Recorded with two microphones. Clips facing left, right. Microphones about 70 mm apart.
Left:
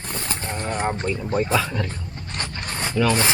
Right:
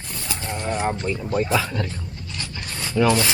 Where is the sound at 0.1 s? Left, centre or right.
Left.